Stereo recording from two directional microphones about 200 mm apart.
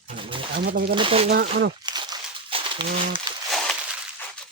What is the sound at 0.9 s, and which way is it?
Speech, 25° right (ahead or behind).